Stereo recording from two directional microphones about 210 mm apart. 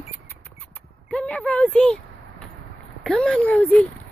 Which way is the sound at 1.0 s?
5° left (ahead or behind).